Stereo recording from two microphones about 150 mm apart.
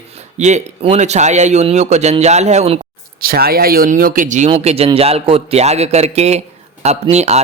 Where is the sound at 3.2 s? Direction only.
85° right; by 4.4 s 60° right (ahead or behind).